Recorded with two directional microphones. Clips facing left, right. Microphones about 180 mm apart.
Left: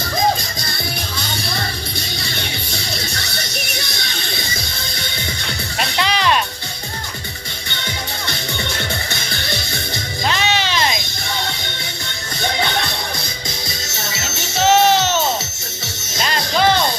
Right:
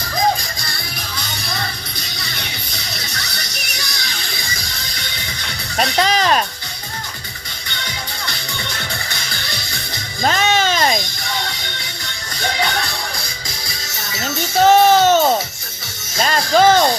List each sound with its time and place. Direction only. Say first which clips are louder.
2.0 s music: left 4 dB; 25° left (ahead or behind)
6.0 s music: right 1 dB; 40° right (ahead or behind)
9.0 s music: left 3 dB; 25° left (ahead or behind)
10.2 s a sound: right 4 dB; 45° right (ahead or behind)
14.6 s music: right 3 dB; 50° right (ahead or behind)